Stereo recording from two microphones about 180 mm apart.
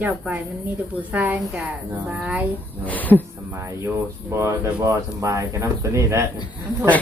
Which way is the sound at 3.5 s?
15° right (ahead or behind).